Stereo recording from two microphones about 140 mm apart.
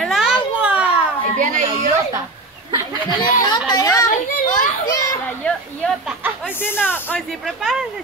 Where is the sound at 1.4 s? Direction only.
65° right (ahead or behind).